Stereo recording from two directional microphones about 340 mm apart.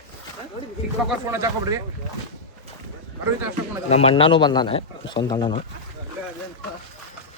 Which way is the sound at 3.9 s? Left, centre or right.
Centre.